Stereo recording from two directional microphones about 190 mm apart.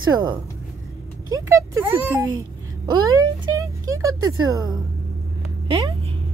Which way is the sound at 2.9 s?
15° right (ahead or behind).